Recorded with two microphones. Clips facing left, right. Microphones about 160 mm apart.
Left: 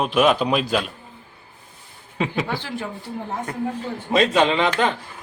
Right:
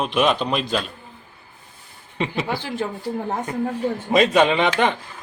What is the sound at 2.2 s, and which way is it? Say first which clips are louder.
Speech: even; centre (ahead or behind).